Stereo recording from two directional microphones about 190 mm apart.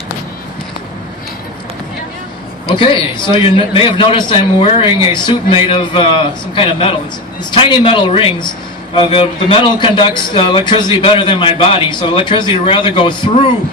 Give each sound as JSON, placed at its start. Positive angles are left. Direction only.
{"t": 2.7, "sound": "a man's voice", "side_deg": 25}